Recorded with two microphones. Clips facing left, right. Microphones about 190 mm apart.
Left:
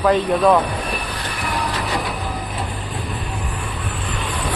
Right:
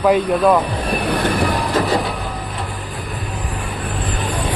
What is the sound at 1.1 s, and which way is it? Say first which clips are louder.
Train: right 11 dB; 55° right (ahead or behind).